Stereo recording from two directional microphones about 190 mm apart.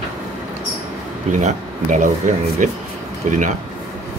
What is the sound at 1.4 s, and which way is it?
Speech, 40° right (ahead or behind).